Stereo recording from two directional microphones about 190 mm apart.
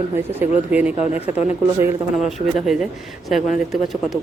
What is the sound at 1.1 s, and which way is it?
Speech, 35° left (ahead or behind).